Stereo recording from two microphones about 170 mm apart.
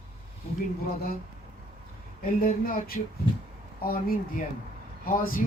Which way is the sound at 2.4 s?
55° left (ahead or behind).